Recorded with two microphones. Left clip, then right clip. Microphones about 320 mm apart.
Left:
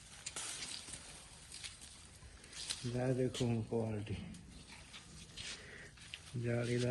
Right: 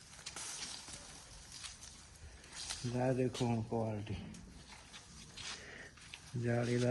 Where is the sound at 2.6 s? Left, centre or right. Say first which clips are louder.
Right 2 dB; centre.